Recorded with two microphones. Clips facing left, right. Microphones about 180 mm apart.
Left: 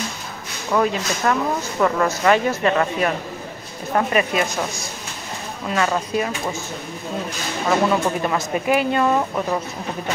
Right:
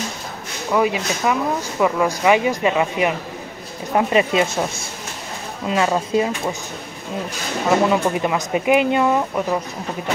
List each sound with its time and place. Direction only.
0.7 s speech: 10° right (ahead or behind)
3.9 s speech: 20° right (ahead or behind)
5.7 s speech: 20° right (ahead or behind)
7.9 s speech: 15° right (ahead or behind)